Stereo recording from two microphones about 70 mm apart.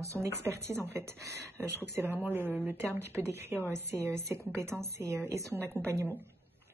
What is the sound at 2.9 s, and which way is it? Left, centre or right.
Speech, right.